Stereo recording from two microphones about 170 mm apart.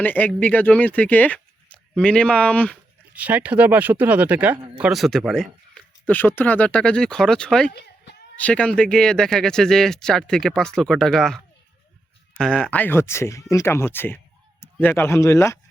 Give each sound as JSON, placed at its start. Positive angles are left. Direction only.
{"t": 0.0, "sound": "speech", "side_deg": 10}
{"t": 3.2, "sound": "speech", "side_deg": -10}
{"t": 7.7, "sound": "a sound", "side_deg": 75}
{"t": 8.4, "sound": "speech", "side_deg": 5}